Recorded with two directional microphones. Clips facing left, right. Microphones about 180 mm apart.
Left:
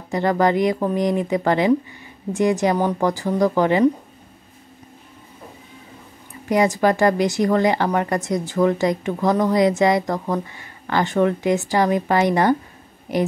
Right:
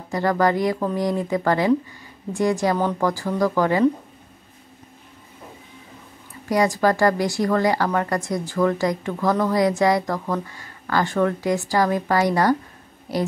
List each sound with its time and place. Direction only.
0.1 s a woman's voice: 20° left (ahead or behind)
6.5 s a woman's voice: 20° left (ahead or behind)